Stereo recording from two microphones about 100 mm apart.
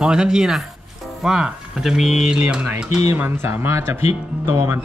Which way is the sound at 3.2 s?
25° right (ahead or behind).